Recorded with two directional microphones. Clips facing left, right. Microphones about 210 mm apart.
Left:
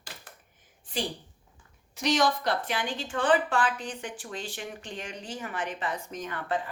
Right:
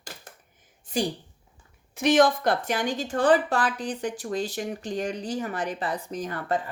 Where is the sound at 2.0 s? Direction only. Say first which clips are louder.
Right 6 dB; 55° right (ahead or behind).